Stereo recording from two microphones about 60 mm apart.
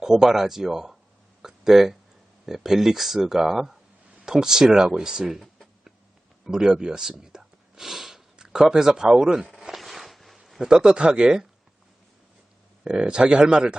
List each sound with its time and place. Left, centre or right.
0.0 s speech: centre
1.4 s a sound: centre
2.5 s speech: centre
9.6 s a sound: centre
10.7 s speech: centre
12.8 s speech: centre